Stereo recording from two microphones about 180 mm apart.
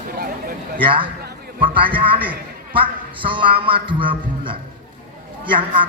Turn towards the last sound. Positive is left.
turn(degrees=-30)  # may be behind; listen again after turning